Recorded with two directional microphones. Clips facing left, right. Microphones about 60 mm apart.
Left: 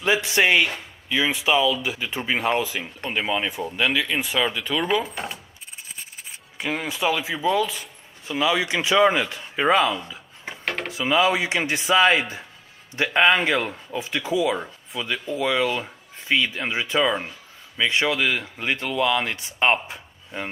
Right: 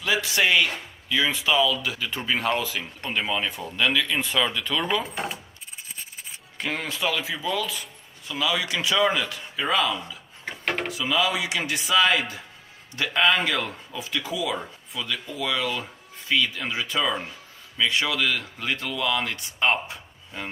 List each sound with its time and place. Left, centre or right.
0.0 s speech: left; by 5.0 s centre
5.1 s coin: centre
6.6 s speech: centre